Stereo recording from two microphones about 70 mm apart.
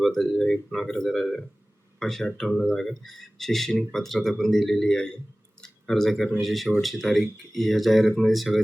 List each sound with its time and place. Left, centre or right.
0.0 s speech: centre